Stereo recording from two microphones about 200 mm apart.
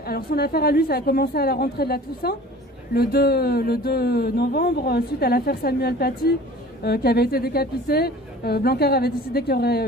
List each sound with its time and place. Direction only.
0.0 s speech: 50° left (ahead or behind)